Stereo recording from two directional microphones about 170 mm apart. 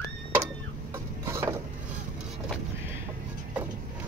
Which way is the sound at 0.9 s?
15° right (ahead or behind).